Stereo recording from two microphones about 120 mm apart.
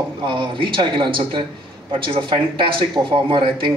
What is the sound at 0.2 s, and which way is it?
A man's voice, 45° right (ahead or behind).